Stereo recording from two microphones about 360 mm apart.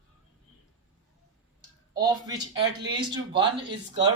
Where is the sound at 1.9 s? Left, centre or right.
Centre.